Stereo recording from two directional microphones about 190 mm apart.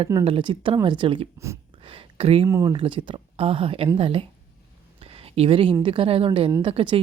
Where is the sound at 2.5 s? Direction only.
20° right (ahead or behind).